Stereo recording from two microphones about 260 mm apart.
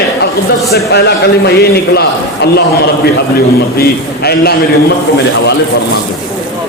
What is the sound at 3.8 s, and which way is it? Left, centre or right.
Speech, left.